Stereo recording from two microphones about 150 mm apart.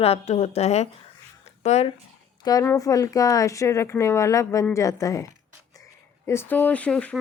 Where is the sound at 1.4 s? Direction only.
45° left (ahead or behind).